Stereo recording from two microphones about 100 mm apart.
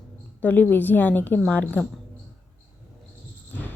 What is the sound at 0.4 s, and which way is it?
A woman's voice, 20° left (ahead or behind).